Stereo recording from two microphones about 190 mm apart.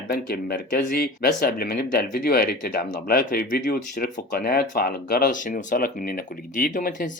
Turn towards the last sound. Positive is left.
turn(degrees=45)  # may be behind; listen again after turning